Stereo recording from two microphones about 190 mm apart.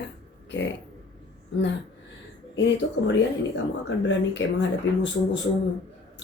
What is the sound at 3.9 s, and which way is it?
Speech, 70° left (ahead or behind).